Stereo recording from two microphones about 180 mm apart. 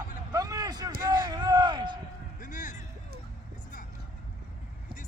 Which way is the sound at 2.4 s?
45° left (ahead or behind).